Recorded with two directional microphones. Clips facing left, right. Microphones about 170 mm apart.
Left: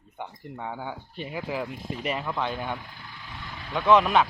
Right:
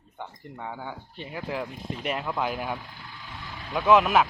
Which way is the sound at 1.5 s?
Centre (ahead or behind).